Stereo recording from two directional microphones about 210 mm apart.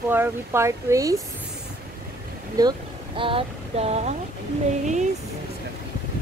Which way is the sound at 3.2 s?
25° right (ahead or behind).